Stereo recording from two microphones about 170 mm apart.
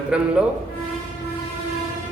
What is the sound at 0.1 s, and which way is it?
Speech, 5° right (ahead or behind).